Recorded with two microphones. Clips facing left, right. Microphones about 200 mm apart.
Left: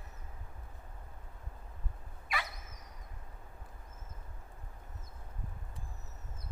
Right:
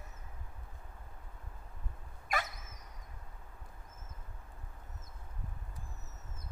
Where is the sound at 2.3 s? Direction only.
45° right (ahead or behind).